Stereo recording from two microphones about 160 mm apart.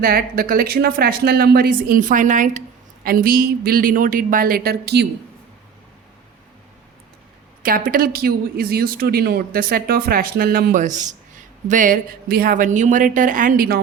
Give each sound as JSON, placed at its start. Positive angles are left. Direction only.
{"t": 0.0, "sound": "speech", "side_deg": -70}
{"t": 7.6, "sound": "a woman's voice", "side_deg": -65}